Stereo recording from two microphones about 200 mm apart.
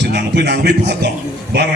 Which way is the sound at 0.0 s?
55° right (ahead or behind).